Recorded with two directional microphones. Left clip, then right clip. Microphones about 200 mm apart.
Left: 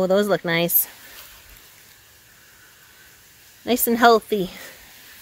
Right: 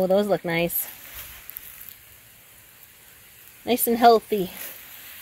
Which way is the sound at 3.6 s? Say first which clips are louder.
Left 1 dB; centre (ahead or behind).